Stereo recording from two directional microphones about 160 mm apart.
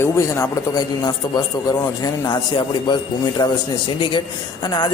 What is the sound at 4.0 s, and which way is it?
Speech, 30° left (ahead or behind).